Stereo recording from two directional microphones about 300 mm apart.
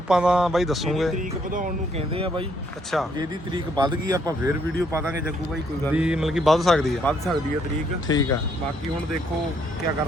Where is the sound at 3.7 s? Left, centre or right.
Centre.